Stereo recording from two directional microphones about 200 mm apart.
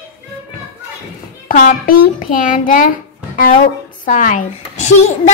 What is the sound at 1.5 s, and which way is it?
A child's voice, 40° left (ahead or behind).